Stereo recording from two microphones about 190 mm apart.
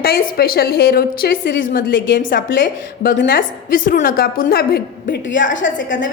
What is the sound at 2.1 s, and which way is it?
Speech, 45° left (ahead or behind).